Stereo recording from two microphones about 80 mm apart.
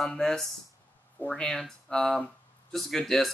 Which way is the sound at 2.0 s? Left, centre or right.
Centre.